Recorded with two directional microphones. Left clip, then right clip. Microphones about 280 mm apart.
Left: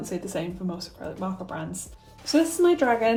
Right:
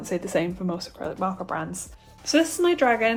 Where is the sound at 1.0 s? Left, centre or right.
Centre.